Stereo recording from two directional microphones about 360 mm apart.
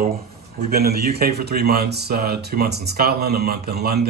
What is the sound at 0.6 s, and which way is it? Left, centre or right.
A man's voice, right.